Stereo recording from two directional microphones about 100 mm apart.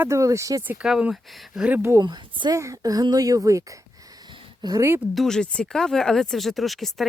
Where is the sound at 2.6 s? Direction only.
35° right (ahead or behind).